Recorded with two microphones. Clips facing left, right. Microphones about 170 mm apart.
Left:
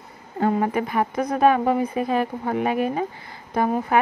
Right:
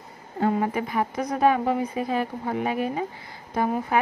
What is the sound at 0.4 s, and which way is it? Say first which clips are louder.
Speech: left 2 dB; 55° left (ahead or behind).